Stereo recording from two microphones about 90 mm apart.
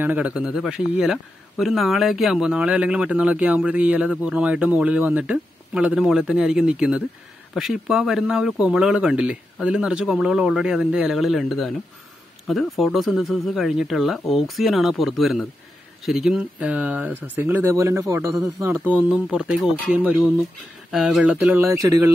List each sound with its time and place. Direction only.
0.0 s a man's voice: 15° right (ahead or behind); by 18.3 s 35° right (ahead or behind)
18.7 s a man's voice: 20° right (ahead or behind)
20.9 s a man's voice: 5° right (ahead or behind)
21.7 s a man's voice: 40° right (ahead or behind)